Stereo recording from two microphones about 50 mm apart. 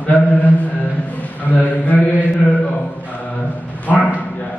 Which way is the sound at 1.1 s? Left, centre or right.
Left.